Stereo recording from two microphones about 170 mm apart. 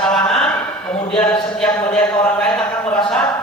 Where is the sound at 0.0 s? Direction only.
5° left (ahead or behind).